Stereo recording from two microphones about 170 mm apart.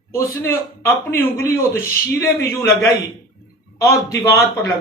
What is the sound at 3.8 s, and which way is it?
Speech, 20° left (ahead or behind).